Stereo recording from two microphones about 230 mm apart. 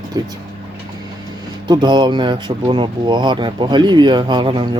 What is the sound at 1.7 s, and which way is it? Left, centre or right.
Speech, centre.